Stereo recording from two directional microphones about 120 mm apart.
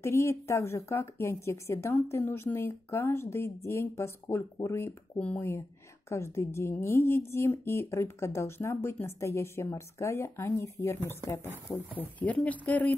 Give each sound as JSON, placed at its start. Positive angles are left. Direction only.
{"t": 0.0, "sound": "speech", "side_deg": 25}
{"t": 5.2, "sound": "speech", "side_deg": 10}
{"t": 6.0, "sound": "speech", "side_deg": 20}